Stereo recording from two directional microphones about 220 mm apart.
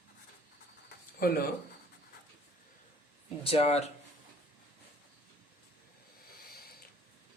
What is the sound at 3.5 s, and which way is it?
Speech, 30° left (ahead or behind).